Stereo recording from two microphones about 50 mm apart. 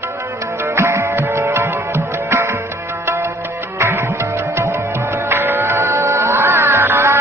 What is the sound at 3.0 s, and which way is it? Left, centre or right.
Music, right.